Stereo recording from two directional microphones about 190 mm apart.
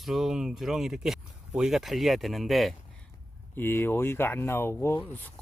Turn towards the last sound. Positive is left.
turn(degrees=10)  # may be behind; listen again after turning